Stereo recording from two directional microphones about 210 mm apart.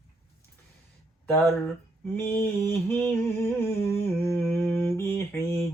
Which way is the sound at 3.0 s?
10° left (ahead or behind).